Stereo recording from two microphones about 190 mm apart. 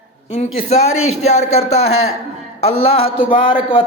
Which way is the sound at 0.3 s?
35° left (ahead or behind).